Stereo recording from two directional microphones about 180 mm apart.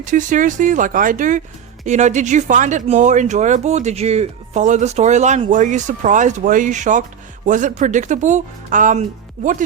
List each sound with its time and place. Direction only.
0.0 s speech: 45° right (ahead or behind)